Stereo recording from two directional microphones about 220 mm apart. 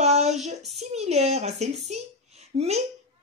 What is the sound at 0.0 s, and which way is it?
Child singing, 30° right (ahead or behind).